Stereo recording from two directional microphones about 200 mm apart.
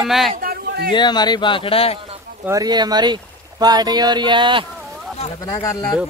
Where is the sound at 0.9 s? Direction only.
20° left (ahead or behind).